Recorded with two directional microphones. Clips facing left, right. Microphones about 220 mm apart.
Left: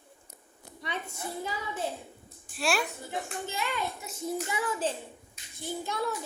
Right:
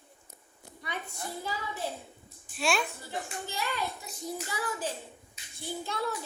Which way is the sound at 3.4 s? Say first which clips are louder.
Even; 20° left (ahead or behind).